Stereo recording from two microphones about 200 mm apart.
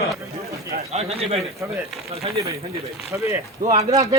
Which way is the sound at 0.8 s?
30° right (ahead or behind).